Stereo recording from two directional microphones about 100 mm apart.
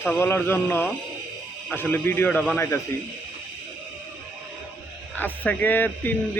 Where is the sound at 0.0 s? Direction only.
25° left (ahead or behind).